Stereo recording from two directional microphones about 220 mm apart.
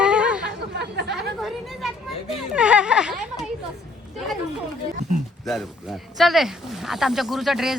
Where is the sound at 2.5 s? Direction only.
5° right (ahead or behind).